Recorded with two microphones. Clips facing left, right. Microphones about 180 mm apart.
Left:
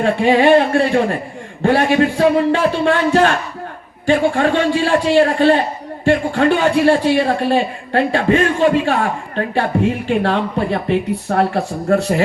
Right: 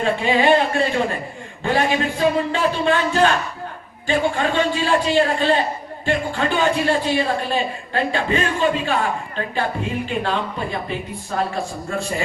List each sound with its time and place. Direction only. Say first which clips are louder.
0.0 s speech: left 5 dB; 60° left (ahead or behind)